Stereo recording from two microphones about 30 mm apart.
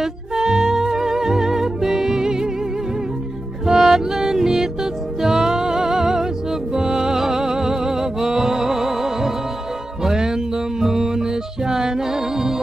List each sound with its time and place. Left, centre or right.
0.0 s music: centre
3.7 s music: centre